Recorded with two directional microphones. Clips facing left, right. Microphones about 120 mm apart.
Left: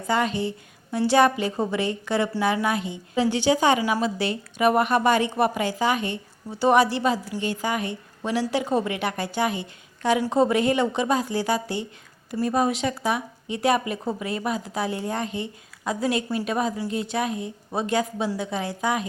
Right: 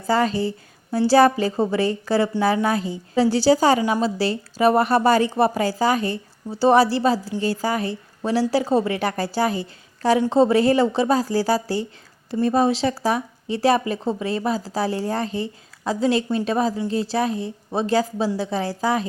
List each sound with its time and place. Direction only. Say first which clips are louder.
0.1 s a woman's voice: right 4 dB; 35° right (ahead or behind)